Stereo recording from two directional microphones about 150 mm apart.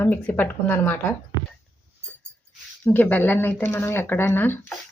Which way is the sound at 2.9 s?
10° left (ahead or behind).